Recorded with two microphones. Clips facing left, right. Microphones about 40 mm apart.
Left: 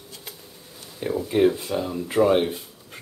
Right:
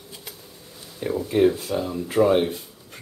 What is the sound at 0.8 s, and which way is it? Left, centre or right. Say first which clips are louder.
Speech: even; centre.